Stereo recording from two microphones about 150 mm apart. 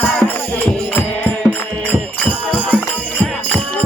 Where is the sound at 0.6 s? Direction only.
10° left (ahead or behind).